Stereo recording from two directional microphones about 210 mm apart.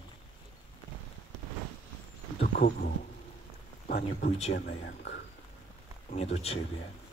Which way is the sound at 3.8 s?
45° left (ahead or behind).